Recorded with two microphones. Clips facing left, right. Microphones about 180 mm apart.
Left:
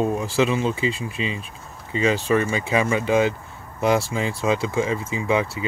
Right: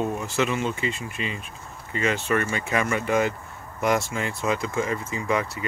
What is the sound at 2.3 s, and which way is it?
Speech, 15° left (ahead or behind).